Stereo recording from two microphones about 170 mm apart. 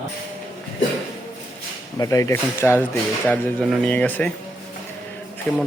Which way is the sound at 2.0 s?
20° left (ahead or behind).